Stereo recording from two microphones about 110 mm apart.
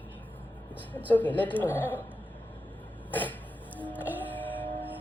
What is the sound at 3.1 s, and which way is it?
Cough, 15° left (ahead or behind).